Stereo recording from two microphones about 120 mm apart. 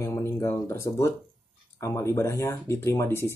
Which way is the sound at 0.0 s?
20° left (ahead or behind).